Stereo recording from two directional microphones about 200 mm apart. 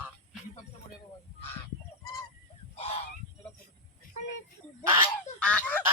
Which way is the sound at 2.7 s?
30° left (ahead or behind).